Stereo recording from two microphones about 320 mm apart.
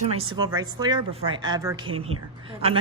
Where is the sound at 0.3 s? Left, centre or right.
Centre.